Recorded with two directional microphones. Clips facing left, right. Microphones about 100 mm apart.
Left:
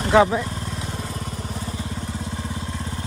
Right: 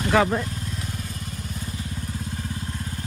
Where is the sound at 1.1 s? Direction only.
45° left (ahead or behind).